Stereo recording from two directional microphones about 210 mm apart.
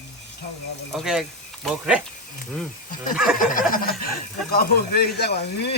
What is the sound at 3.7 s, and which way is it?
Speech, 45° left (ahead or behind).